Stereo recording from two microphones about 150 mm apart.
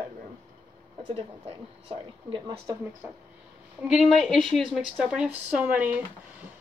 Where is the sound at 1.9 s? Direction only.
30° right (ahead or behind).